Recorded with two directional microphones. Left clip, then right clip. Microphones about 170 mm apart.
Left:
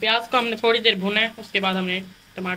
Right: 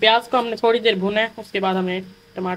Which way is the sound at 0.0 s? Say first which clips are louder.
Right 4 dB; 40° right (ahead or behind).